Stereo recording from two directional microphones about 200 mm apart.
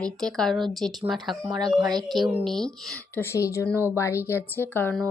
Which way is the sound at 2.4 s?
Centre (ahead or behind).